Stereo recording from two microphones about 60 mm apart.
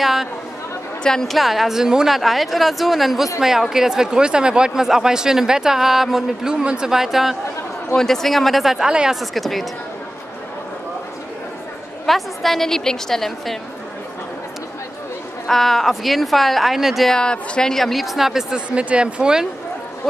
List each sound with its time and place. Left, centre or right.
0.0 s a woman's voice: centre
1.0 s a woman's voice: centre
7.9 s a woman's voice: centre
8.7 s a man's voice: centre
9.2 s a woman's voice: centre
12.1 s a woman's voice: centre
15.4 s a woman's voice: centre
17.1 s a woman's voice: centre
18.7 s speech: centre